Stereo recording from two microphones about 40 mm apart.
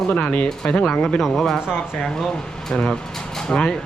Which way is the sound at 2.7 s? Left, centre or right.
Centre.